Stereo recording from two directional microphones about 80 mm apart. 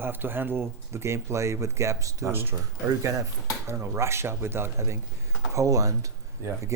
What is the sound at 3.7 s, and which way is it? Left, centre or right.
Speech, right.